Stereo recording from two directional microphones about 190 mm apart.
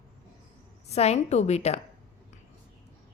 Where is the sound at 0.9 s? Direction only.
35° left (ahead or behind).